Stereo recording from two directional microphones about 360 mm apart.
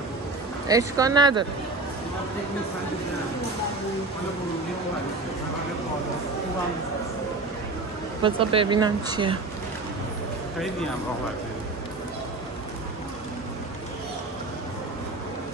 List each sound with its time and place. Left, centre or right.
0.7 s speech: centre
8.2 s speech: centre